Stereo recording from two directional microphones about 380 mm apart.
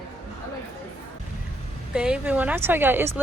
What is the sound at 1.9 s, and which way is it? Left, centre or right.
Speech, centre.